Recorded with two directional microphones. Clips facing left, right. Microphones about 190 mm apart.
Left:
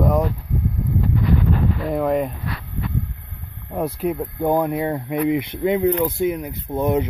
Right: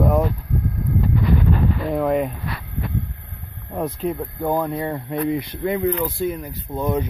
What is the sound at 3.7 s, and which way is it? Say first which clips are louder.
Speech: left 2 dB; 10° left (ahead or behind).